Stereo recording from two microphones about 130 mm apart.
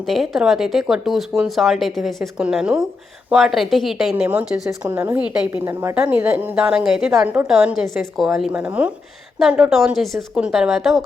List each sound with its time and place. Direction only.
0.1 s a woman's voice: centre (ahead or behind)